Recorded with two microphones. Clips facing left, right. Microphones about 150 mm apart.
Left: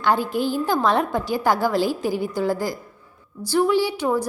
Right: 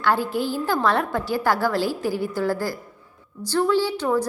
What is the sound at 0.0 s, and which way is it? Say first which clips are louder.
A woman's voice: left 1 dB; 15° left (ahead or behind).